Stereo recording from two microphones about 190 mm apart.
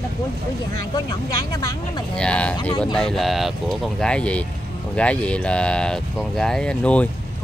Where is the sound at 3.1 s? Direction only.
Centre (ahead or behind).